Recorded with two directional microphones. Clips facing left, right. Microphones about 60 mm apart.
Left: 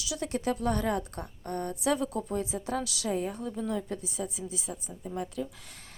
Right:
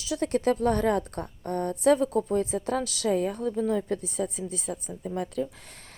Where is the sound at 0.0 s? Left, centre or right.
Right.